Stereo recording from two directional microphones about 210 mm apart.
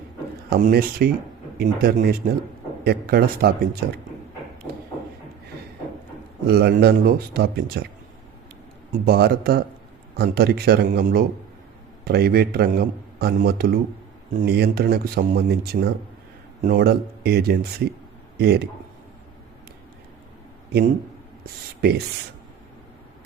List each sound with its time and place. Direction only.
0.5 s a man's voice: 45° right (ahead or behind)
6.5 s a man's voice: 50° right (ahead or behind)
8.9 s a man's voice: 50° right (ahead or behind)
21.8 s speech: 50° right (ahead or behind)